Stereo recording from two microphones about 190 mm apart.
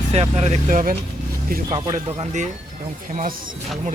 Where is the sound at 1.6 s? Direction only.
25° right (ahead or behind).